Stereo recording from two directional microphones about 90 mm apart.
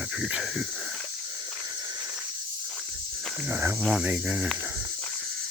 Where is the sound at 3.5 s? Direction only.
30° right (ahead or behind).